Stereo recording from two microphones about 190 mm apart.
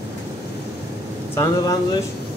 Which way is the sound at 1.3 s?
20° left (ahead or behind).